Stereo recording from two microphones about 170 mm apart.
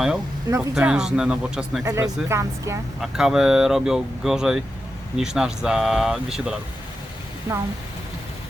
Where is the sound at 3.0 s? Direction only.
Centre (ahead or behind).